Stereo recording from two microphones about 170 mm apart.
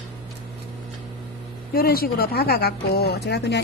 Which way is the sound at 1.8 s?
65° left (ahead or behind).